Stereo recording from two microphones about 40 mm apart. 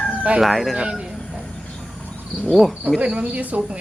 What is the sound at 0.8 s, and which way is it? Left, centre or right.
Speech, right.